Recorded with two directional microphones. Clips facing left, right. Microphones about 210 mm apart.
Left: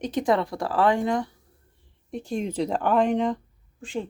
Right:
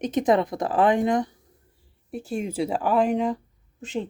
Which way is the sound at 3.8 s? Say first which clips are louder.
Right 2 dB; 20° right (ahead or behind).